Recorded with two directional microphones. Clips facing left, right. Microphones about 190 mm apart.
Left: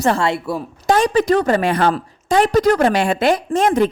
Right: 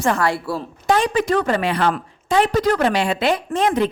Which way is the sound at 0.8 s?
40° left (ahead or behind).